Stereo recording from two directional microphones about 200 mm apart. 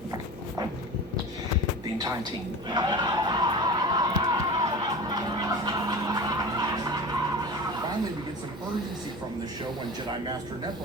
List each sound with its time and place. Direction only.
2.6 s crowd: 20° right (ahead or behind)